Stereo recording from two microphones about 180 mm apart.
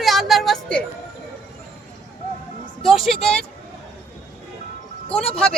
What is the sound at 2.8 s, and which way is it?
Speech, centre (ahead or behind).